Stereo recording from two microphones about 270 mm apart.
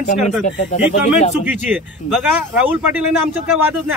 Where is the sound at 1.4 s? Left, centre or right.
Centre.